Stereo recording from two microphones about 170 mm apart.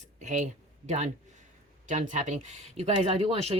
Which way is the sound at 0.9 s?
40° right (ahead or behind).